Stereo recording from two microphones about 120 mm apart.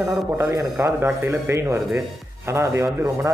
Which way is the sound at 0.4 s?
20° right (ahead or behind).